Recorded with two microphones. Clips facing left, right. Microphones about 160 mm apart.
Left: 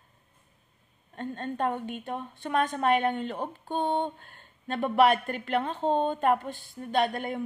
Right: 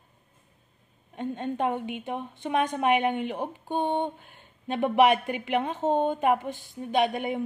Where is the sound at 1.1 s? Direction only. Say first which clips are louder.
Right 3 dB; 15° right (ahead or behind).